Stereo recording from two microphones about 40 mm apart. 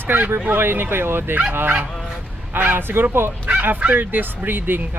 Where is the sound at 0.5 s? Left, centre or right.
Right.